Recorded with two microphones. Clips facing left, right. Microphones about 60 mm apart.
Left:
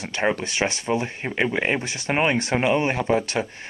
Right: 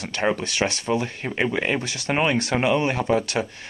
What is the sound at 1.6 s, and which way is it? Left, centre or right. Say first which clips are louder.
Speech: even; left.